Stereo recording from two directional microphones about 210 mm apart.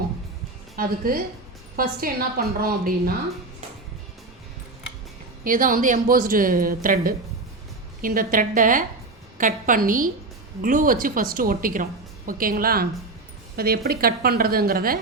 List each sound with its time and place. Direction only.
0.8 s a woman's voice: 45° right (ahead or behind)
5.4 s a woman's voice: 40° right (ahead or behind)